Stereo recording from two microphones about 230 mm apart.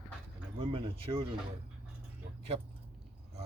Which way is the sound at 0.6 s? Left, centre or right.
Right.